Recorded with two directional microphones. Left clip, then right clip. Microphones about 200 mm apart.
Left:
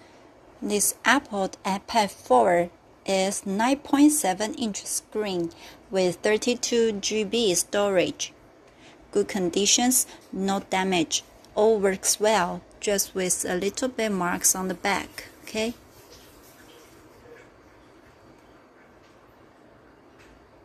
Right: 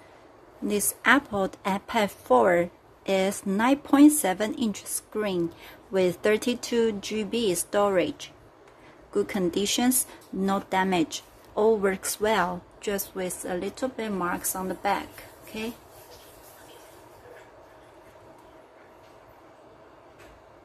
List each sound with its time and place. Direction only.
0.7 s a woman's voice: 10° right (ahead or behind)
13.1 s a woman's voice: 10° left (ahead or behind)